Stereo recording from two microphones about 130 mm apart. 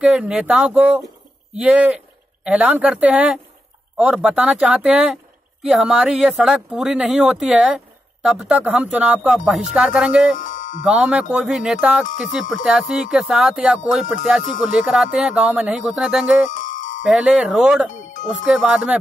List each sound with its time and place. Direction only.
0.0 s speech: 5° right (ahead or behind)
10.3 s music: 80° left
10.8 s speech: 10° right (ahead or behind)
16.4 s music: 80° left
17.0 s speech: 5° right (ahead or behind)